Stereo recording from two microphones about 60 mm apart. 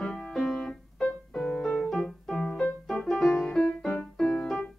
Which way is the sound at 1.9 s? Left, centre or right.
Centre.